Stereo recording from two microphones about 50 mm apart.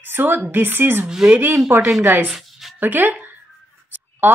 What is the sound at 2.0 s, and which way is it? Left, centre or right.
Speech, right.